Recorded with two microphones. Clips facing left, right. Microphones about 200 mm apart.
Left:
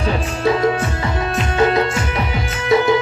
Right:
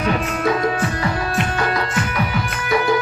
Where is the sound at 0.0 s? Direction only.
30° left (ahead or behind).